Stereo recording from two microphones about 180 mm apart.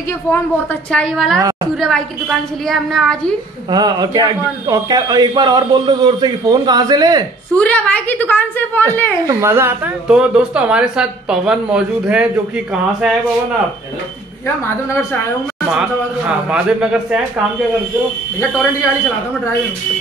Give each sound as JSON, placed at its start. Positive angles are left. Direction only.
{"t": 0.9, "sound": "speech", "side_deg": 0}
{"t": 3.7, "sound": "a man's voice", "side_deg": -20}
{"t": 7.5, "sound": "a woman's voice", "side_deg": 5}
{"t": 9.2, "sound": "speech", "side_deg": -15}
{"t": 16.4, "sound": "speech", "side_deg": -5}